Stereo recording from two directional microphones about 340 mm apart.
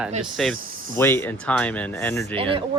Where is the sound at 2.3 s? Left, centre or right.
Centre.